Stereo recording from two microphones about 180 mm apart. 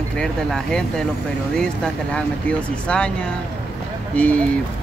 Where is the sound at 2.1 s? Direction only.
5° left (ahead or behind).